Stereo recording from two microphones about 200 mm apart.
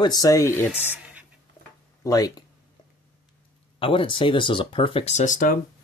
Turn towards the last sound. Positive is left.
turn(degrees=40)  # may be behind; listen again after turning